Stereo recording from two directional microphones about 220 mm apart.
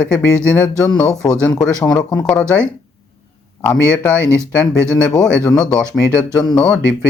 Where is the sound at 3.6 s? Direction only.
5° left (ahead or behind).